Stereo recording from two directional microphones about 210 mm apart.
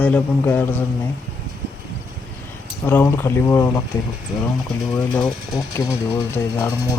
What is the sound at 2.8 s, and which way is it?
Speech, 10° left (ahead or behind).